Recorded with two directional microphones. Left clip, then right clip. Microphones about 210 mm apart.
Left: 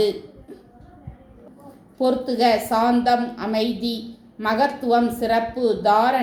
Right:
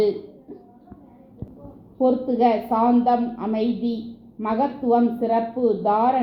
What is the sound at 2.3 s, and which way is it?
Speech, 20° left (ahead or behind).